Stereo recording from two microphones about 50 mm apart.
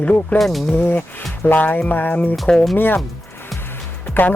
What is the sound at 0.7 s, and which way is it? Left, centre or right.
Speech, left.